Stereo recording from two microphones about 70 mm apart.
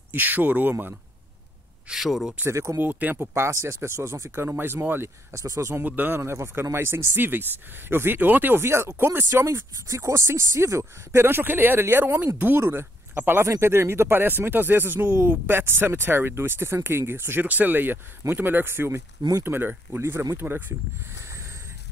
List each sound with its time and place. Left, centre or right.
0.1 s speech: right
1.9 s speech: centre
2.4 s speech: right
2.8 s speech: right
3.3 s speech: right
4.5 s speech: right
5.3 s speech: right
5.9 s speech: right
6.1 s speech: right
13.4 s speech: right